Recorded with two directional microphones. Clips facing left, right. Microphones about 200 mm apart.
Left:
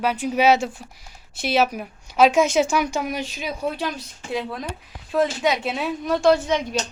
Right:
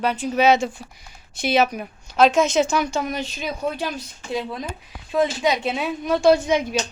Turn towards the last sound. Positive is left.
turn(degrees=-5)  # may be behind; listen again after turning